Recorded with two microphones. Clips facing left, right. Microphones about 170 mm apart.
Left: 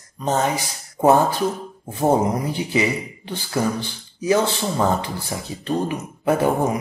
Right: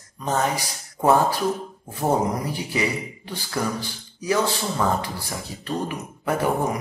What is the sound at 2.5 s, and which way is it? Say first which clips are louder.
Speech: left 4 dB; 20° left (ahead or behind).